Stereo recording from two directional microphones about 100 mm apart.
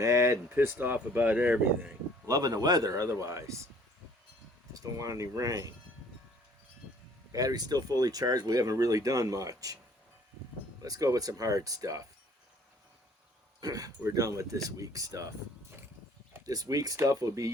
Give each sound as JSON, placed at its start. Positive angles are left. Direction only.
{"t": 0.0, "sound": "speech", "side_deg": -30}
{"t": 2.2, "sound": "speech", "side_deg": -40}
{"t": 4.7, "sound": "speech", "side_deg": -35}
{"t": 7.3, "sound": "speech", "side_deg": -40}
{"t": 10.8, "sound": "speech", "side_deg": -35}
{"t": 13.6, "sound": "speech", "side_deg": -35}
{"t": 16.5, "sound": "speech", "side_deg": -40}